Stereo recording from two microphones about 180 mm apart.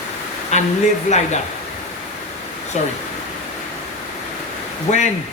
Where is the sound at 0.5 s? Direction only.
40° left (ahead or behind).